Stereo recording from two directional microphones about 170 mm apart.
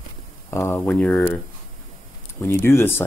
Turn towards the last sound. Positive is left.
turn(degrees=15)  # may be behind; listen again after turning